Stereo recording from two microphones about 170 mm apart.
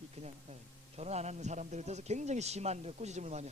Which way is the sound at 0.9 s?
40° right (ahead or behind).